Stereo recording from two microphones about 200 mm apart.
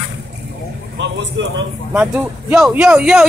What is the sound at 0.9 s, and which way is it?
Speech, 60° right (ahead or behind).